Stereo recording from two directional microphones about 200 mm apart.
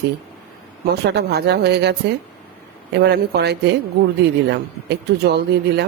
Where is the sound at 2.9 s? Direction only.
55° right (ahead or behind).